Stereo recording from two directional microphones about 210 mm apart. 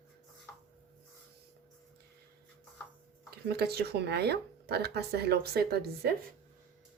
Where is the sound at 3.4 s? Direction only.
50° right (ahead or behind).